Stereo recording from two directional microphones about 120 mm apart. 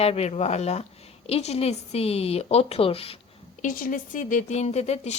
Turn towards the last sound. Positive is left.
turn(degrees=65)  # may be behind; listen again after turning